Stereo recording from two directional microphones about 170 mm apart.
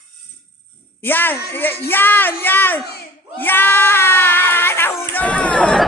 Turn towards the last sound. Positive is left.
turn(degrees=5)  # may be behind; listen again after turning